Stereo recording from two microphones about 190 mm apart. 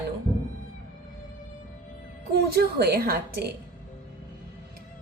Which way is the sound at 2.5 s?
55° right (ahead or behind).